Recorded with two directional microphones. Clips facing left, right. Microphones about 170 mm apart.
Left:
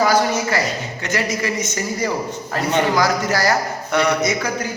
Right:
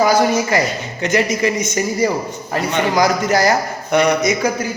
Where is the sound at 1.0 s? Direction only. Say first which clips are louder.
Right 6 dB; 20° right (ahead or behind).